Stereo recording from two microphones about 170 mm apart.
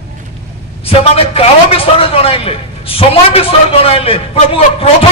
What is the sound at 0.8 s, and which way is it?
A man's voice, 35° left (ahead or behind).